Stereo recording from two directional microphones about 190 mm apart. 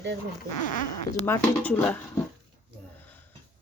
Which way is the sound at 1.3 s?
10° left (ahead or behind).